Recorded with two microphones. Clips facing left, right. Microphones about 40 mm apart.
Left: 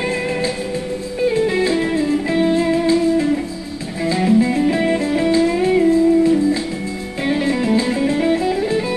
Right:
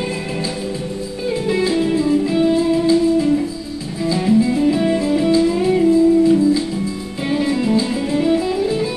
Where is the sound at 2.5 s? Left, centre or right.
Left.